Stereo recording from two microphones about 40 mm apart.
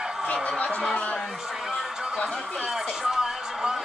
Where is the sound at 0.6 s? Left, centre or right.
Left.